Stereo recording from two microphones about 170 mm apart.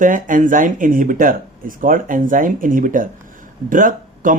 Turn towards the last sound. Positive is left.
turn(degrees=-50)  # may be behind; listen again after turning